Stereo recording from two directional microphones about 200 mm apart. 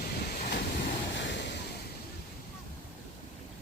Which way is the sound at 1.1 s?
65° left (ahead or behind).